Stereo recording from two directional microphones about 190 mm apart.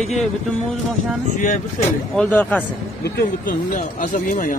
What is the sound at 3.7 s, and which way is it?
Speech, 40° left (ahead or behind).